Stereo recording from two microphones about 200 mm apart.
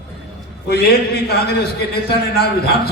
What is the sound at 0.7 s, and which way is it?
A man's voice, 55° left (ahead or behind).